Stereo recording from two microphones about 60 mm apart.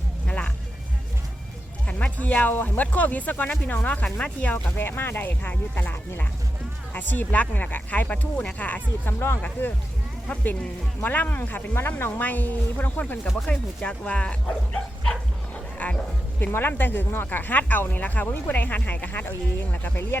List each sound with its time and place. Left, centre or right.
0.3 s music: centre
1.9 s speech: left
4.5 s speech: left
9.1 s speech: left
9.4 s speech: left
13.3 s speech: centre
15.8 s a sound: left
16.5 s speech: left